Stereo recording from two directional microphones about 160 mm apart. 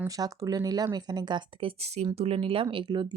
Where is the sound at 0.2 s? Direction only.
25° right (ahead or behind).